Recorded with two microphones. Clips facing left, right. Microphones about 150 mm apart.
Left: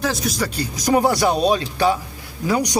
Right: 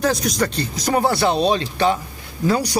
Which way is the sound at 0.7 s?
15° left (ahead or behind).